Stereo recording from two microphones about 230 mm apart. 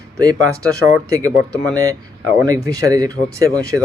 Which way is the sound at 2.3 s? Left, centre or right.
Centre.